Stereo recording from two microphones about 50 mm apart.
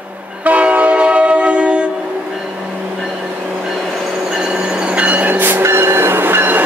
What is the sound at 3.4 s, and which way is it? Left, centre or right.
Train, right.